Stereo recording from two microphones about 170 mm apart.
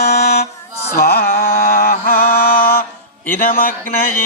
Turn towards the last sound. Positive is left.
turn(degrees=55)  # may be behind; listen again after turning